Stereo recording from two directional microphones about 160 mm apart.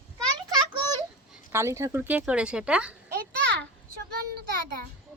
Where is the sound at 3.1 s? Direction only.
80° right.